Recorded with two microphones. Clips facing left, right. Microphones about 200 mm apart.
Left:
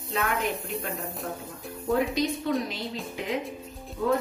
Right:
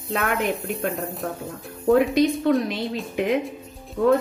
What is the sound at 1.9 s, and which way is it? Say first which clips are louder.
Speech: right 8 dB; 60° right (ahead or behind).